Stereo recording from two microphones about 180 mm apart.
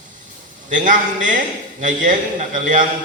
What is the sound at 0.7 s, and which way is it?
A man's voice, 45° right (ahead or behind).